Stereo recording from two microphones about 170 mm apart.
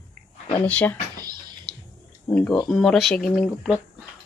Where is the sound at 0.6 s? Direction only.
10° left (ahead or behind).